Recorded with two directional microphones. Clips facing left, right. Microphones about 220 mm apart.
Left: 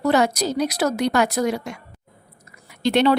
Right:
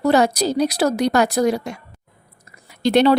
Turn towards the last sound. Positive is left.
turn(degrees=-40)  # may be behind; listen again after turning